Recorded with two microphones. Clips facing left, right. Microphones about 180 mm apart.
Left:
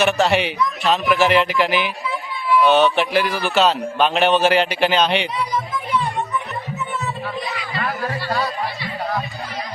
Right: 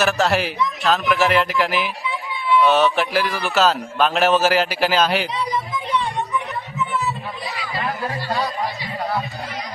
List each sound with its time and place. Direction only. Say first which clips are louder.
0.0 s a man's voice: left 2 dB; centre (ahead or behind)
7.8 s chatter: left 1 dB; 10° right (ahead or behind)